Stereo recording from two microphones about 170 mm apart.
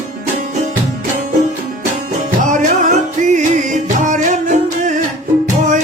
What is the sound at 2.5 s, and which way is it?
Music, 50° right (ahead or behind).